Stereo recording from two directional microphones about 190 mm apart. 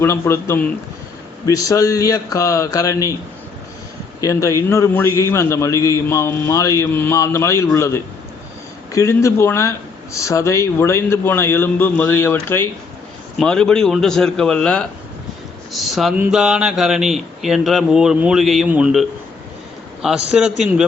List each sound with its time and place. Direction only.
0.0 s a man's voice: 15° left (ahead or behind)
4.2 s a man's voice: 15° left (ahead or behind); by 20.8 s 5° right (ahead or behind)